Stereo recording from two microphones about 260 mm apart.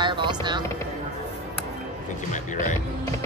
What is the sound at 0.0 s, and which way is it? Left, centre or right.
Music, centre.